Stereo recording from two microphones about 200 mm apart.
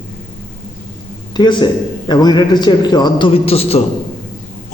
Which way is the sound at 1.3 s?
20° left (ahead or behind).